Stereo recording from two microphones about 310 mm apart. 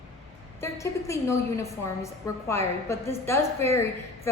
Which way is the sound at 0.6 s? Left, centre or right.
Centre.